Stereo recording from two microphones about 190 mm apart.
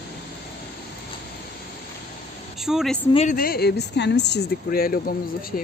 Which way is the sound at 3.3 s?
50° left (ahead or behind).